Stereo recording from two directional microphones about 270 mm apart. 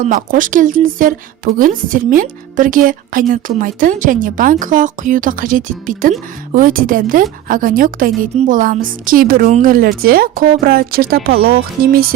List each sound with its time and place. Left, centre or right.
0.0 s a woman's voice: right